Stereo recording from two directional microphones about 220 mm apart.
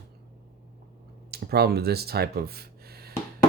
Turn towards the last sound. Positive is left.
turn(degrees=-45)  # may be behind; listen again after turning